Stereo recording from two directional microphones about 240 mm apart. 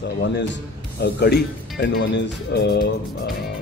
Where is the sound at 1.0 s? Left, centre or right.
Left.